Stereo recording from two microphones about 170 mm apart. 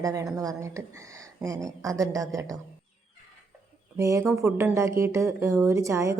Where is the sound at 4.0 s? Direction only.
15° right (ahead or behind).